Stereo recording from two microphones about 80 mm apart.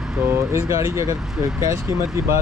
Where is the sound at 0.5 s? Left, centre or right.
Right.